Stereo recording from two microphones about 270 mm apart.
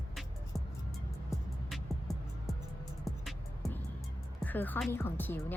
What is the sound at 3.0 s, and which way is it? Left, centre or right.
Music, centre.